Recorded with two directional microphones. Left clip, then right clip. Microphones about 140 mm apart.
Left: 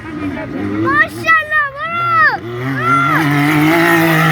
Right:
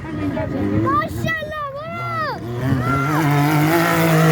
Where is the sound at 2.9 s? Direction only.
70° right (ahead or behind).